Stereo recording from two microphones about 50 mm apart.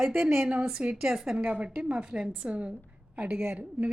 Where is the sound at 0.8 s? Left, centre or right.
Centre.